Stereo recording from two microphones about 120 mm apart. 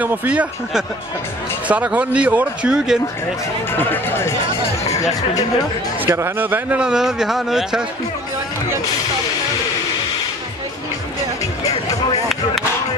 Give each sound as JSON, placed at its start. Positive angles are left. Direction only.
{"t": 0.0, "sound": "a man's voice", "side_deg": -15}
{"t": 3.7, "sound": "speech", "side_deg": 20}
{"t": 5.9, "sound": "a man's voice", "side_deg": -20}